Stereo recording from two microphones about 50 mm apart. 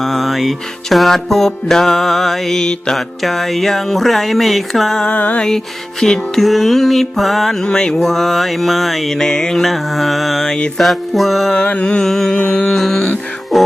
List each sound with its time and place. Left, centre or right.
0.0 s music: centre
3.2 s music: centre
5.0 s mantra: left
5.4 s music: centre
7.6 s music: centre
10.5 s music: centre
10.8 s music: centre
11.7 s mantra: left
11.9 s music: centre